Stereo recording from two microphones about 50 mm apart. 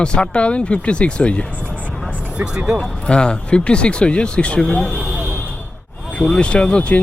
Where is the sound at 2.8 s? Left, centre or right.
Centre.